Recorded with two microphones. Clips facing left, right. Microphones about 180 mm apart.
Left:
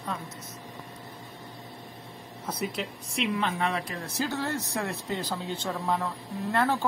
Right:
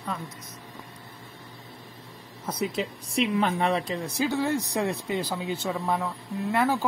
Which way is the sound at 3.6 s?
30° right (ahead or behind).